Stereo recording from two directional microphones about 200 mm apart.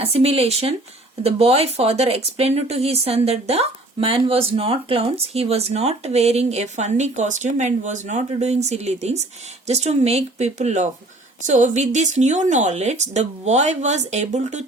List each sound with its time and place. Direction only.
0.0 s speech: 30° right (ahead or behind)